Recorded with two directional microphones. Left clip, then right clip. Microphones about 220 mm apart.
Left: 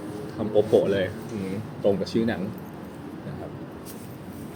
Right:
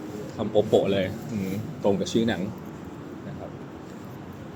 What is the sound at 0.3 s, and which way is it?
Speech, 5° right (ahead or behind).